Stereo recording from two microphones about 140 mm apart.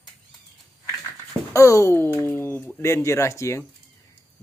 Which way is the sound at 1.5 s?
20° left (ahead or behind).